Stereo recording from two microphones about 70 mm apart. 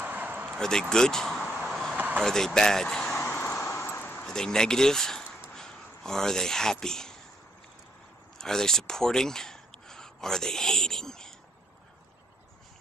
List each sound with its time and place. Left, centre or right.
0.0 s a sound: right
0.6 s speech: centre
1.7 s vehicle: centre
2.0 s vehicle: right
2.2 s speech: centre
3.3 s vehicle: left
4.3 s speech: centre
8.4 s a sound: centre